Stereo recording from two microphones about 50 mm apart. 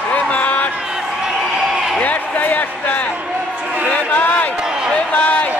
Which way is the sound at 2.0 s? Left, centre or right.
Left.